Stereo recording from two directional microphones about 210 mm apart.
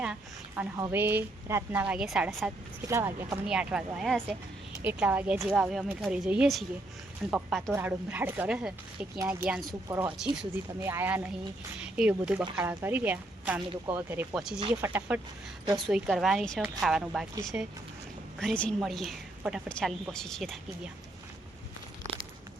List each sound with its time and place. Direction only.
0.0 s a woman's voice: 5° right (ahead or behind)